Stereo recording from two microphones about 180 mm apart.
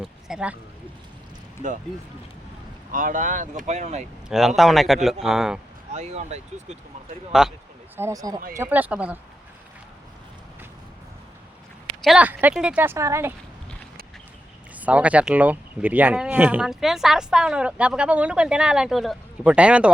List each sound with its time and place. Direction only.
0.0 s speech: 5° right (ahead or behind)
2.9 s speech: 45° right (ahead or behind)
4.3 s speech: centre (ahead or behind)
5.9 s speech: 40° right (ahead or behind)
7.4 s speech: 5° right (ahead or behind)
7.9 s speech: 15° right (ahead or behind)
12.0 s speech: 5° right (ahead or behind)
14.8 s speech: 10° right (ahead or behind)